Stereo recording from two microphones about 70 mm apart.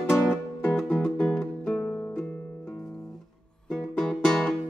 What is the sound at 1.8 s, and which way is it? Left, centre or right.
Music, centre.